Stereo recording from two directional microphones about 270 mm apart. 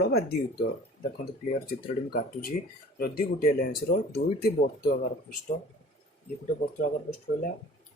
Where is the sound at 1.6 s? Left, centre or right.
Left.